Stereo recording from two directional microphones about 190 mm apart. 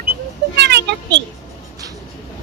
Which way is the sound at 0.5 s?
65° right (ahead or behind).